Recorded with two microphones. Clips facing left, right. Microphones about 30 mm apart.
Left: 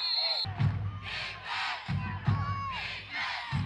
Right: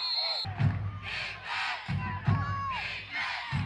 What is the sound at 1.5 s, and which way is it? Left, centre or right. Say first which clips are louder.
Crowd: right 1 dB; centre.